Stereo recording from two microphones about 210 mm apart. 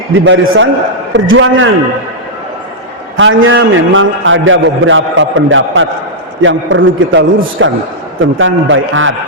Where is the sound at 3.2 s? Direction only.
65° right (ahead or behind).